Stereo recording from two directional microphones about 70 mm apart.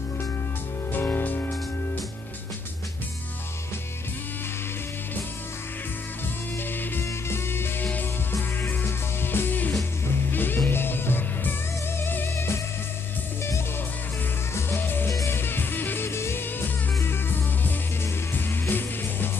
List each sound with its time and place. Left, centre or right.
0.9 s music: left
6.8 s music: left
14.5 s music: left